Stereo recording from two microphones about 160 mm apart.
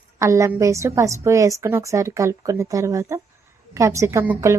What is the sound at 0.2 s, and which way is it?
A woman's voice, 20° right (ahead or behind).